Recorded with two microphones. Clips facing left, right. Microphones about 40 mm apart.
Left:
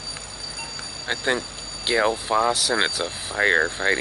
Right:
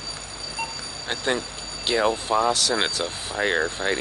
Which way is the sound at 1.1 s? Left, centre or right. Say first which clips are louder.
Left 2 dB; centre.